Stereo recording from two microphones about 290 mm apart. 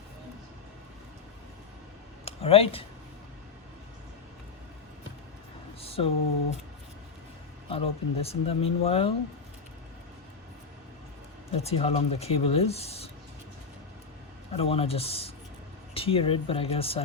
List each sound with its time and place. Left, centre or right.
2.2 s speech: centre
5.8 s a sound: centre
7.7 s speech: centre
11.5 s speech: left
14.5 s speech: centre